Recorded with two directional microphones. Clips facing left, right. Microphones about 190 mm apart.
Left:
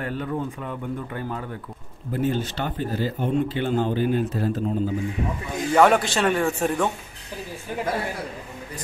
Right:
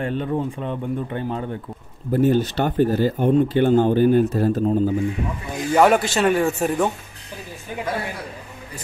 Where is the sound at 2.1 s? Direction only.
45° right (ahead or behind).